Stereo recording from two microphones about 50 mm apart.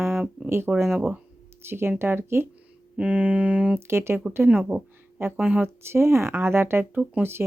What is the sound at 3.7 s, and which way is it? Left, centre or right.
Speech, right.